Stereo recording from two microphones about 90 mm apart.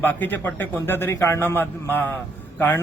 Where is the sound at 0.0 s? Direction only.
20° left (ahead or behind).